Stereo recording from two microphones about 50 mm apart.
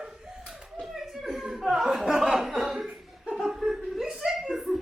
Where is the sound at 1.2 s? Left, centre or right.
Centre.